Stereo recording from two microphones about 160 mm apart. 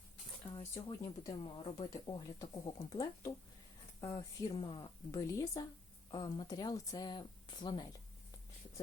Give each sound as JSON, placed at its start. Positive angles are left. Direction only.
{"t": 0.5, "sound": "speech", "side_deg": 20}
{"t": 1.3, "sound": "speech", "side_deg": 35}
{"t": 1.9, "sound": "speech", "side_deg": 25}